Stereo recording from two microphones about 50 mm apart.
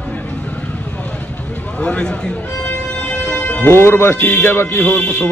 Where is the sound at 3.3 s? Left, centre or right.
Left.